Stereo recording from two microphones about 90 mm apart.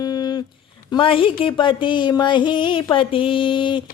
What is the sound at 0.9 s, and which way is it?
Speech, 75° left (ahead or behind).